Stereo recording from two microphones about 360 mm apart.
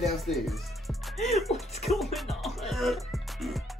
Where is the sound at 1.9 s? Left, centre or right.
Centre.